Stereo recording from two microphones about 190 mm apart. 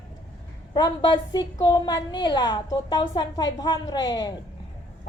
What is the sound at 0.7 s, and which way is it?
A woman's voice, 25° left (ahead or behind).